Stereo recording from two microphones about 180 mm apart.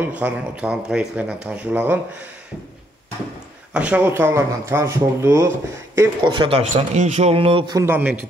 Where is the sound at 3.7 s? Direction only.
5° right (ahead or behind).